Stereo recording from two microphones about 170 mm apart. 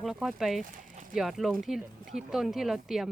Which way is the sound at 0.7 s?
55° right (ahead or behind).